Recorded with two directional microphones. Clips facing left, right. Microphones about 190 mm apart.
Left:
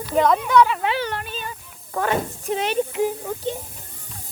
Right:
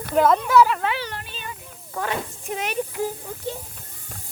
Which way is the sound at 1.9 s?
55° left (ahead or behind).